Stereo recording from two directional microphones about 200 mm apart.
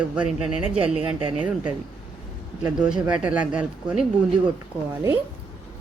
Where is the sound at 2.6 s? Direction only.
5° right (ahead or behind).